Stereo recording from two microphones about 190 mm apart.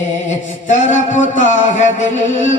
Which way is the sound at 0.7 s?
40° left (ahead or behind).